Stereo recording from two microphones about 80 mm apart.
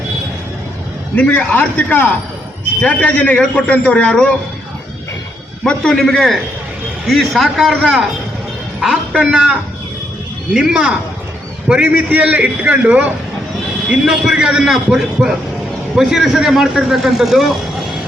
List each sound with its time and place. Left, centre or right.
1.1 s a man's voice: centre
5.6 s a man's voice: centre
9.1 s a man's voice: centre
13.9 s a man's voice: centre